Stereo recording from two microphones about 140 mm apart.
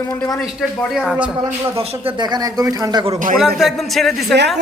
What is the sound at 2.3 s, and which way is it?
Speech, 25° right (ahead or behind).